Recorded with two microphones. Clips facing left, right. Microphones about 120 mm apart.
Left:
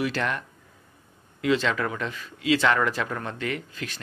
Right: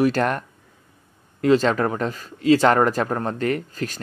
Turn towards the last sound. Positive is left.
turn(degrees=-40)  # may be behind; listen again after turning